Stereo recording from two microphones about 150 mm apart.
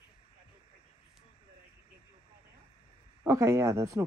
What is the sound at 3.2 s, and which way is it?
Speech, 20° right (ahead or behind).